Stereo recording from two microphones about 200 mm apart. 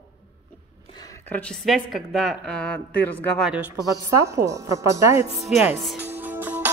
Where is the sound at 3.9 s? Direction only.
15° right (ahead or behind).